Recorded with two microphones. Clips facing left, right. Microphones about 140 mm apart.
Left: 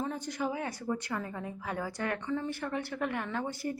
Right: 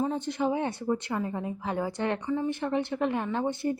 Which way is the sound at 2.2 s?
15° right (ahead or behind).